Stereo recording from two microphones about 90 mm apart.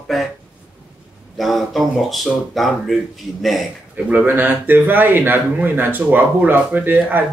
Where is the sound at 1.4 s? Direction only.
Centre (ahead or behind).